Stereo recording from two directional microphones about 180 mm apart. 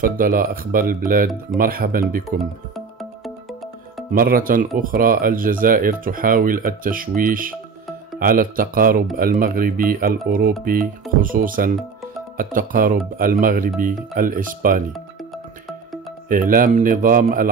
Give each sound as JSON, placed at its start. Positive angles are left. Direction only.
{"t": 0.0, "sound": "speech", "side_deg": -50}
{"t": 2.2, "sound": "music", "side_deg": 0}
{"t": 4.1, "sound": "speech", "side_deg": -55}
{"t": 16.3, "sound": "speech", "side_deg": -50}